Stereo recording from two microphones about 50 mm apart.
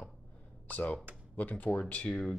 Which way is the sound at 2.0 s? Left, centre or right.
Centre.